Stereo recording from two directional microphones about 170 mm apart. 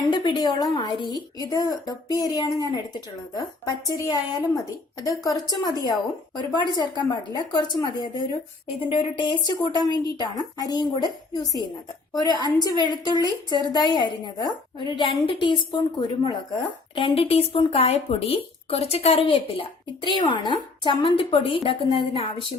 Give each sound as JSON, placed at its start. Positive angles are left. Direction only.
{"t": 0.1, "sound": "a woman's voice", "side_deg": 30}
{"t": 4.0, "sound": "a woman's voice", "side_deg": 25}